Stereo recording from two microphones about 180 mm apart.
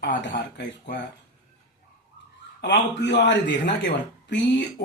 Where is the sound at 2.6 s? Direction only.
75° left (ahead or behind).